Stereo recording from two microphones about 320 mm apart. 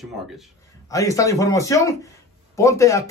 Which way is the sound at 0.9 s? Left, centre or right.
Centre.